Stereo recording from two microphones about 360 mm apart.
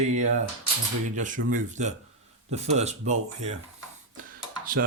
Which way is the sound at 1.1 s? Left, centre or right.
Right.